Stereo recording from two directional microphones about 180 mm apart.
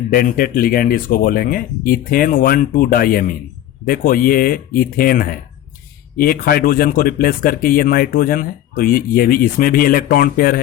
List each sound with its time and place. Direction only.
0.1 s speech: 50° left (ahead or behind)